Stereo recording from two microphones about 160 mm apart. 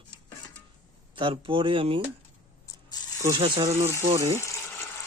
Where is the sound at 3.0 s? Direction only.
25° left (ahead or behind).